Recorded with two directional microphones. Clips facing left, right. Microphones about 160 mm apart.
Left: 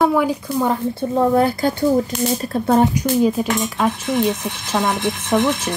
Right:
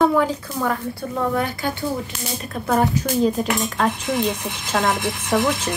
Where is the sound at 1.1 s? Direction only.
35° left (ahead or behind).